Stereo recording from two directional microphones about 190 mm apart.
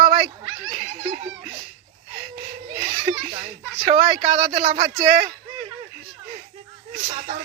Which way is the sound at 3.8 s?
45° right (ahead or behind).